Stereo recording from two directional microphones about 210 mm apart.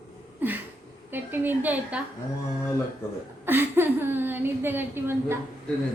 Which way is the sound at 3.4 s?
10° right (ahead or behind).